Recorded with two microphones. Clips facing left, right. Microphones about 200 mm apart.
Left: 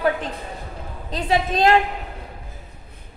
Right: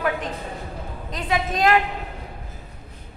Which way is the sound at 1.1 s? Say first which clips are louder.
Left 4 dB; 30° left (ahead or behind).